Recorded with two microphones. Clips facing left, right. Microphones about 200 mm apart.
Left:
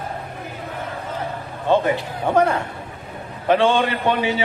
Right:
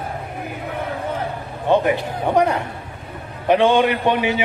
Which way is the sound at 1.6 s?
15° right (ahead or behind).